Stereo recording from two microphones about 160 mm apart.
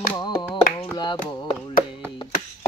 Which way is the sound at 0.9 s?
30° left (ahead or behind).